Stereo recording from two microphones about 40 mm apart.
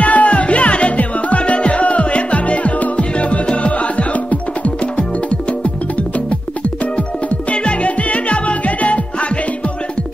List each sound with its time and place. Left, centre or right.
0.0 s music: left
7.2 s music: left